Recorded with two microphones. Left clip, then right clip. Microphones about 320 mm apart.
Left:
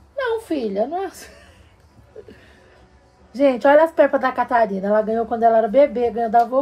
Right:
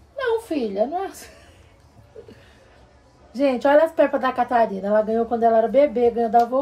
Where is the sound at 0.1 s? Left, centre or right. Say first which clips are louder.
Left 1 dB; centre.